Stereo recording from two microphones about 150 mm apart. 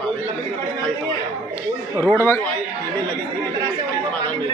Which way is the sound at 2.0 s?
15° left (ahead or behind).